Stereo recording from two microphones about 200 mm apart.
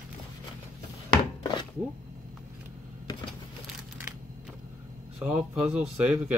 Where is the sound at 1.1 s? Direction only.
25° left (ahead or behind).